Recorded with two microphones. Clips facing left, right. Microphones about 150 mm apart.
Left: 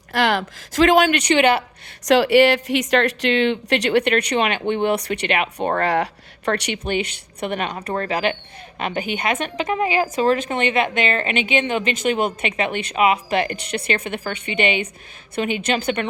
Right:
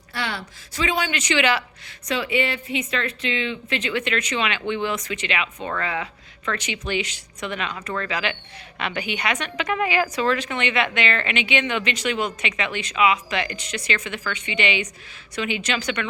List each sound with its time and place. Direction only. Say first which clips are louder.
0.1 s speech: left 10 dB; 90° left
1.0 s speech: left 6 dB; 55° left (ahead or behind)
2.0 s speech: left 10 dB; 80° left; by 5.9 s 60° left (ahead or behind)
5.9 s a woman's voice: left 8 dB; 75° left (ahead or behind); by 9.6 s 45° left (ahead or behind)
9.6 s a woman's voice: left 2 dB; 30° left (ahead or behind); by 16.0 s 45° left (ahead or behind)